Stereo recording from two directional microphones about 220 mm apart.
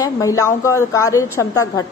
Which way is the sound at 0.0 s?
15° left (ahead or behind).